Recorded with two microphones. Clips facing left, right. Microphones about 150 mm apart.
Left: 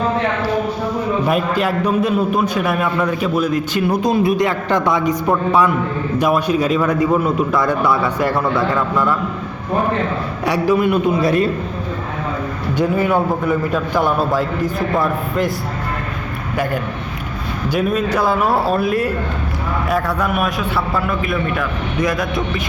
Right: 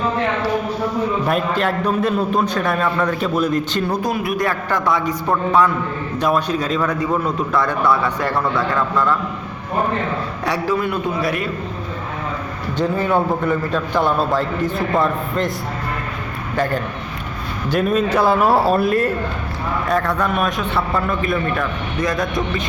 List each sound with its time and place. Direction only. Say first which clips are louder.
1.3 s a man's voice: left 2 dB; 5° left (ahead or behind)
4.1 s a man's voice: left 5 dB; 25° left (ahead or behind)
6.1 s a man's voice: left 3 dB; 10° left (ahead or behind)
10.4 s a man's voice: left 5 dB; 15° left (ahead or behind)
13.0 s a man's voice: left 1 dB; 10° left (ahead or behind)
17.7 s a man's voice: right 1 dB; 5° left (ahead or behind)